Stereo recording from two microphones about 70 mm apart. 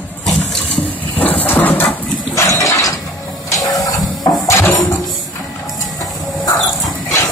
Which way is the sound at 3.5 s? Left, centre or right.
Left.